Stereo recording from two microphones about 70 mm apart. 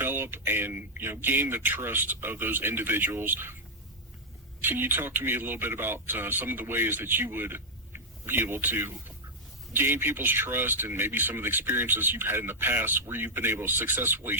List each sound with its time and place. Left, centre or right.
0.0 s speech: right
4.6 s speech: right